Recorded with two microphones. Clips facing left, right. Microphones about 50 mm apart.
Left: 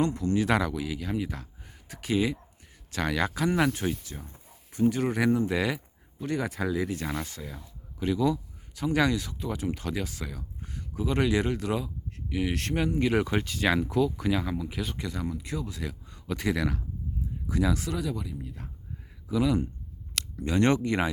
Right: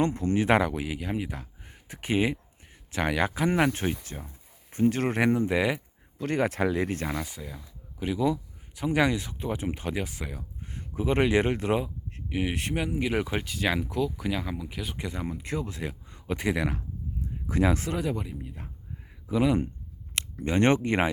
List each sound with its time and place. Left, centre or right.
0.0 s a man's voice: right
4.7 s speech: right
5.5 s a man's voice: centre
6.1 s speech: right
7.3 s speech: centre
10.8 s speech: right; by 14.9 s centre
14.9 s a man's voice: right
15.4 s speech: right
15.8 s speech: right
17.4 s speech: right
18.4 s a man's voice: right
19.3 s speech: right